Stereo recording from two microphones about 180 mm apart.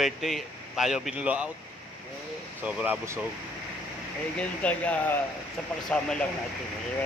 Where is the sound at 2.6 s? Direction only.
10° right (ahead or behind).